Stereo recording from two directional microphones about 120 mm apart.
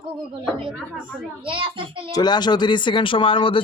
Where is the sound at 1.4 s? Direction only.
45° right (ahead or behind).